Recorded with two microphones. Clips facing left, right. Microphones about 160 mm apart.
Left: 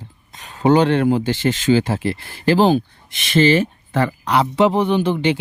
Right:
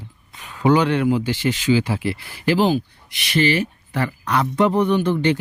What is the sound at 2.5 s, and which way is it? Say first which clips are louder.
Speech: left 3 dB; 35° left (ahead or behind).